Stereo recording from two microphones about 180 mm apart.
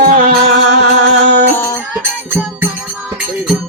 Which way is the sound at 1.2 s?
10° left (ahead or behind).